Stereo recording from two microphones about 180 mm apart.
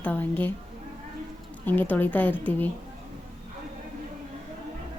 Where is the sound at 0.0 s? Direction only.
10° left (ahead or behind).